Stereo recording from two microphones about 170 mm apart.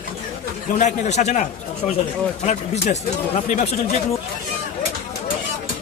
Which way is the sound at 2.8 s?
45° left (ahead or behind).